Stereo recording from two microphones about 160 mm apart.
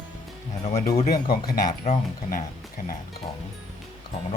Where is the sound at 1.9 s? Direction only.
40° left (ahead or behind).